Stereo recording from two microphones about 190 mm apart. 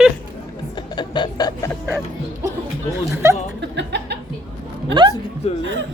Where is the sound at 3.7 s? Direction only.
65° right (ahead or behind).